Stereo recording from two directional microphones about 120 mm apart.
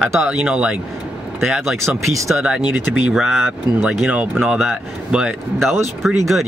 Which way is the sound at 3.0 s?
5° right (ahead or behind).